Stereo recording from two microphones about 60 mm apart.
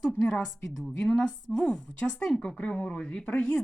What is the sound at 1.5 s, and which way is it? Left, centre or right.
Speech, centre.